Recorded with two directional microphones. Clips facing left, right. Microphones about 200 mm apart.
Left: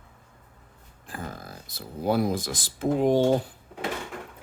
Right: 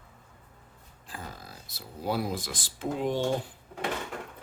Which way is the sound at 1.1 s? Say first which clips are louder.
Left 5 dB; 50° left (ahead or behind).